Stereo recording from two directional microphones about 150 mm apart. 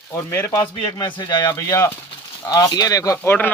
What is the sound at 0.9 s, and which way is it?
Speech, 25° left (ahead or behind).